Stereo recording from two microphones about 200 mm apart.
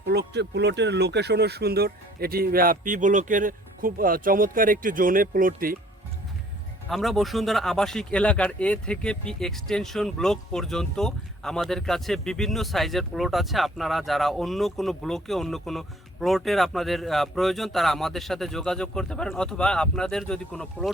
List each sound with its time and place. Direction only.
0.0 s speech: 55° right (ahead or behind)
6.8 s speech: centre (ahead or behind)